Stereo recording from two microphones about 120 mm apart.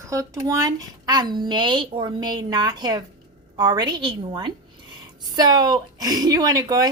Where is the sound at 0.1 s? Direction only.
25° right (ahead or behind).